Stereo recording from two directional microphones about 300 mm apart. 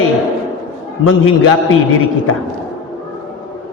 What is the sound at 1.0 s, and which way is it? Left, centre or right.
Speech, left.